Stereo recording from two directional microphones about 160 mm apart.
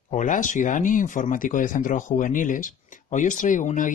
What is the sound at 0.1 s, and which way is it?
Speech, 50° left (ahead or behind).